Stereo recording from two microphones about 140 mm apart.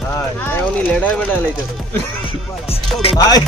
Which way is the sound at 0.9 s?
10° left (ahead or behind).